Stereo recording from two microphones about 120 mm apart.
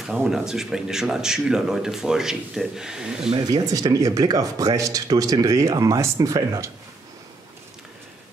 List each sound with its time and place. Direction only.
0.0 s speech: 5° right (ahead or behind)
3.3 s speech: 35° right (ahead or behind)